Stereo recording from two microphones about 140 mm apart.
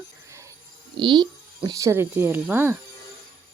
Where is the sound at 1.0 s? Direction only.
35° right (ahead or behind).